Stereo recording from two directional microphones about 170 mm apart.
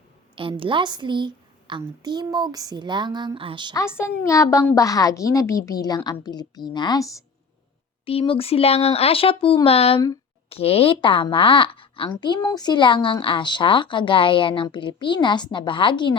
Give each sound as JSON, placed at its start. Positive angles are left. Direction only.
{"t": 0.3, "sound": "a woman's voice", "side_deg": -30}
{"t": 1.8, "sound": "a sound", "side_deg": -25}
{"t": 3.8, "sound": "a woman's voice", "side_deg": 15}
{"t": 8.0, "sound": "a woman's voice", "side_deg": 30}